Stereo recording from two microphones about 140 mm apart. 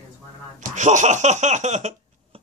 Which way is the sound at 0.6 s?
60° right (ahead or behind).